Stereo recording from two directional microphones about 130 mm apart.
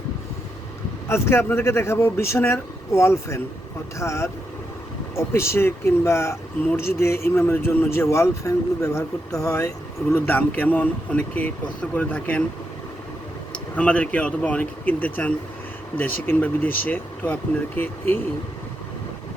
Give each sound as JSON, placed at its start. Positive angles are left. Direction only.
{"t": 1.0, "sound": "a man's voice", "side_deg": 20}
{"t": 10.2, "sound": "speech", "side_deg": 15}
{"t": 13.5, "sound": "speech", "side_deg": 10}